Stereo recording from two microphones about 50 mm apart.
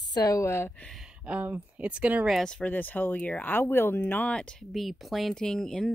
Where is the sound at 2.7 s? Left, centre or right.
Left.